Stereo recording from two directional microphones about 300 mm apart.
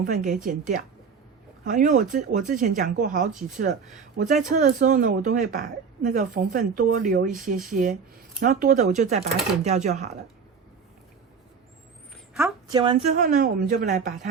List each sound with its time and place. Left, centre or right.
0.0 s speech: right
12.7 s speech: centre